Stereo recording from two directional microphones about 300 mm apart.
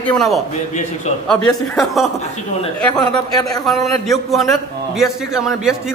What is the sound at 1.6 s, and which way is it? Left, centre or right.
A man's voice, centre.